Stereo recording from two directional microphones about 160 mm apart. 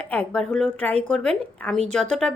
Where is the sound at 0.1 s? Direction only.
5° left (ahead or behind).